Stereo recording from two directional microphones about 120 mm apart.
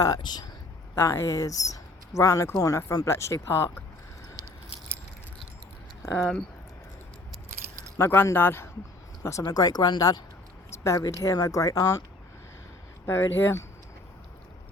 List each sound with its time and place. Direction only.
0.0 s speech: 35° left (ahead or behind)
0.9 s speech: 25° left (ahead or behind)
6.1 s speech: 5° left (ahead or behind)
7.9 s speech: 20° left (ahead or behind)
9.4 s speech: 30° left (ahead or behind)
13.1 s speech: 20° left (ahead or behind)